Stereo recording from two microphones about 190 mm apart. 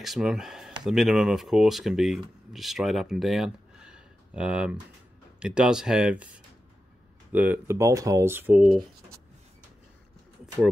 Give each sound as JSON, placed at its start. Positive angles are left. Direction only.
{"t": 0.0, "sound": "speech", "side_deg": 0}